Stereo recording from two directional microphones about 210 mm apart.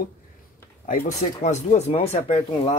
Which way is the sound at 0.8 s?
35° left (ahead or behind).